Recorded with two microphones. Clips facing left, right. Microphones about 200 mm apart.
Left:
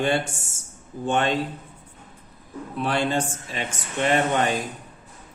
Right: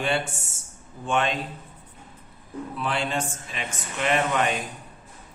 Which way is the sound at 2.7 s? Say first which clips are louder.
Left 5 dB; 35° left (ahead or behind).